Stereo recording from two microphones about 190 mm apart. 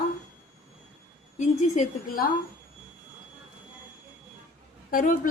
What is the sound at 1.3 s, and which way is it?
Speech, 40° left (ahead or behind).